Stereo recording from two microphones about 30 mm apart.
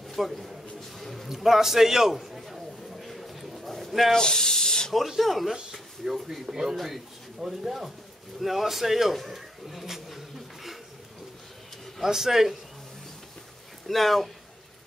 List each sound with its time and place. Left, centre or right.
0.1 s a man's voice: centre
0.7 s a sound: centre
1.3 s a man's voice: centre
2.3 s a sound: centre
4.2 s snake: left
4.9 s a man's voice: centre
5.5 s a man's voice: centre
9.1 s a sound: centre
12.0 s a man's voice: centre
13.8 s speech: centre